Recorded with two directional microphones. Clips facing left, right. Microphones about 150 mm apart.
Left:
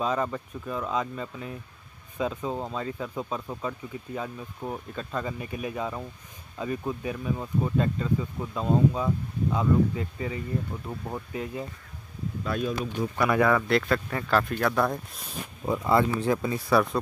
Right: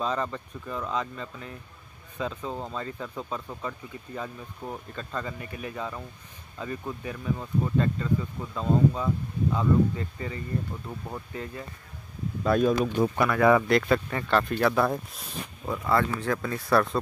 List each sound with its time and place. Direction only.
0.0 s speech: 5° left (ahead or behind)
12.4 s speech: 50° right (ahead or behind)
13.7 s speech: centre (ahead or behind)
15.6 s speech: 15° left (ahead or behind)